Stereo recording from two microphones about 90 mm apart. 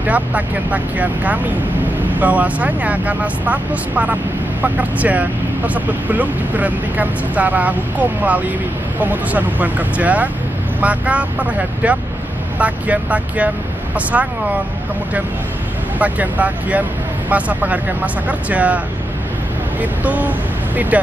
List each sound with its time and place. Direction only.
0.0 s speech: 15° right (ahead or behind)
16.0 s speech: 15° right (ahead or behind)
19.8 s speech: 15° right (ahead or behind)